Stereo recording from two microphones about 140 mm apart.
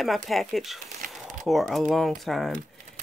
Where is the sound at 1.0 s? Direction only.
75° right (ahead or behind).